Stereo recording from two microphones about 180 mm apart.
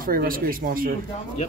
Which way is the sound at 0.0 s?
55° right (ahead or behind).